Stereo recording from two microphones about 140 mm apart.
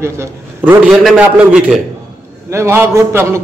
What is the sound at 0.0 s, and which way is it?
Speech, 20° right (ahead or behind).